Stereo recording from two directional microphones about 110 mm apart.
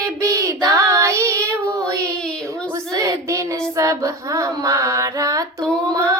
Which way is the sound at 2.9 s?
30° right (ahead or behind).